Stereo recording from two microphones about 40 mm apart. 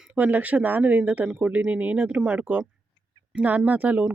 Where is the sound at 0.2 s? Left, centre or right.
Right.